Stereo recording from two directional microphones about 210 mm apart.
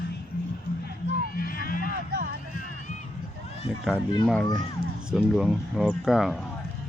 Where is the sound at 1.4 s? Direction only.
45° left (ahead or behind).